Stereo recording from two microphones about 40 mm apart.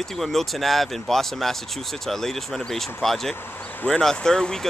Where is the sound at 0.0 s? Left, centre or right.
Centre.